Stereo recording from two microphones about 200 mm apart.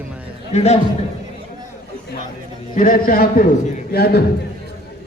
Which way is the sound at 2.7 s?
45° left (ahead or behind).